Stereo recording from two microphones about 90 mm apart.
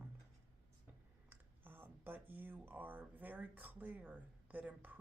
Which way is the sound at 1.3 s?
20° right (ahead or behind).